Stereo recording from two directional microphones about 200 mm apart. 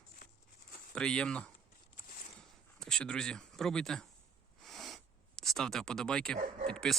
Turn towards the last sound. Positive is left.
turn(degrees=5)  # may be behind; listen again after turning